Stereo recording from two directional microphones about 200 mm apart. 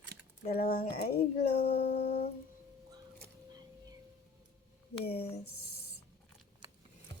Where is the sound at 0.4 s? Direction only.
50° left (ahead or behind).